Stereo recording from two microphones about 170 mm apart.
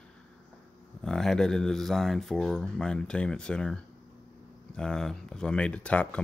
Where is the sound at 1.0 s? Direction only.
5° left (ahead or behind).